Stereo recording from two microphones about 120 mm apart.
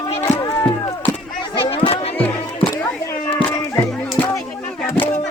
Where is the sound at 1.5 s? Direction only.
45° left (ahead or behind).